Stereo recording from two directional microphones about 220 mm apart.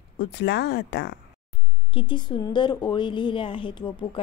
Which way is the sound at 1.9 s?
20° left (ahead or behind).